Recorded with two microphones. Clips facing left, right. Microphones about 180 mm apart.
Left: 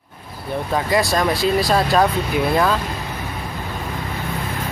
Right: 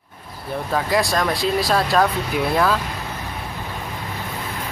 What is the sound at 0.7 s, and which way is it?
Speech, centre (ahead or behind).